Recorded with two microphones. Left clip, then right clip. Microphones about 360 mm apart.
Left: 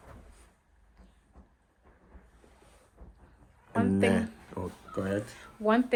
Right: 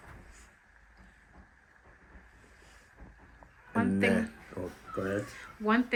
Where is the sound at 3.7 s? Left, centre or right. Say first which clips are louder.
Left 2 dB; centre.